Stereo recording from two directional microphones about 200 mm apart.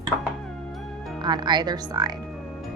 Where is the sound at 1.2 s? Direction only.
20° right (ahead or behind).